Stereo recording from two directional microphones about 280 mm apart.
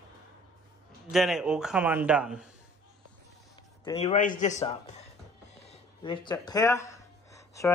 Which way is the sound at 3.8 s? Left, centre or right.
Centre.